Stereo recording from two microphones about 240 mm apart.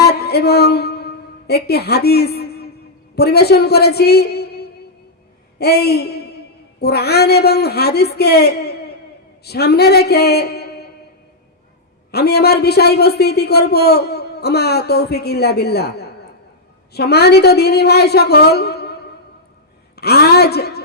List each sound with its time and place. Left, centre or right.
0.0 s a sound: left
3.2 s a man's voice: left
12.1 s speech: left
20.0 s a woman's voice: left